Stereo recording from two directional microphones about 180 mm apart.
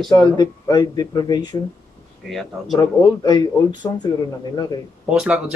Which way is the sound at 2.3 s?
Centre (ahead or behind).